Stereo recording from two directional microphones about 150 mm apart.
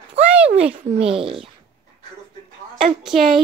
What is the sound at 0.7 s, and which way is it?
Speech, 40° right (ahead or behind).